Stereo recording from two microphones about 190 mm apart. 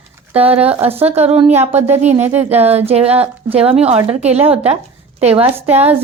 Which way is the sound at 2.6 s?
35° right (ahead or behind).